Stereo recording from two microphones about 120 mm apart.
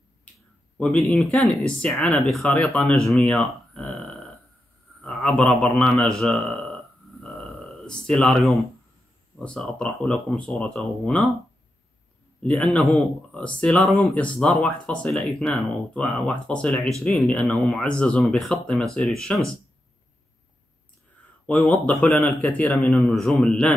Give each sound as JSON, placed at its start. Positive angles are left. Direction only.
{"t": 0.7, "sound": "a man's voice", "side_deg": 10}
{"t": 3.3, "sound": "a sound", "side_deg": 0}
{"t": 5.0, "sound": "a man's voice", "side_deg": 5}
{"t": 7.2, "sound": "a sound", "side_deg": 5}
{"t": 9.4, "sound": "speech", "side_deg": 10}
{"t": 12.4, "sound": "a man's voice", "side_deg": 10}
{"t": 21.5, "sound": "a man's voice", "side_deg": 10}